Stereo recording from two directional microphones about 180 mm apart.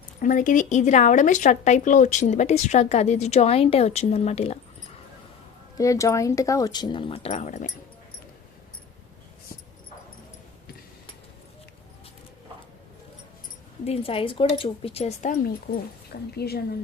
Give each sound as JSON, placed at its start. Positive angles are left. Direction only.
{"t": 0.2, "sound": "speech", "side_deg": 45}
{"t": 5.7, "sound": "speech", "side_deg": 20}
{"t": 13.8, "sound": "speech", "side_deg": 35}
{"t": 15.7, "sound": "speech", "side_deg": 60}